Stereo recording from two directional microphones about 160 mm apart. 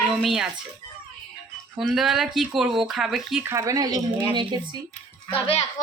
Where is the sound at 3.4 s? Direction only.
20° right (ahead or behind).